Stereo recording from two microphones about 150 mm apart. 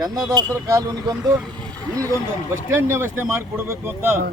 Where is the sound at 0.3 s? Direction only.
20° right (ahead or behind).